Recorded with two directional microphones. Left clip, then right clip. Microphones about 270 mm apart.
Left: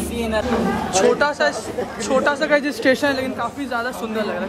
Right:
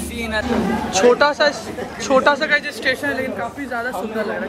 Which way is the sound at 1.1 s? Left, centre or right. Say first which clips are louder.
Right 3 dB; centre.